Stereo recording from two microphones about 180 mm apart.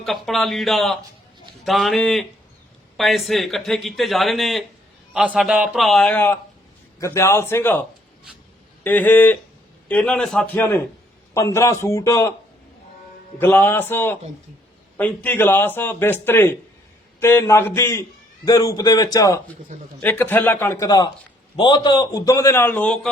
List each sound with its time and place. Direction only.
0.0 s a man's voice: centre (ahead or behind); by 12.3 s 15° left (ahead or behind)
13.4 s a man's voice: 10° left (ahead or behind)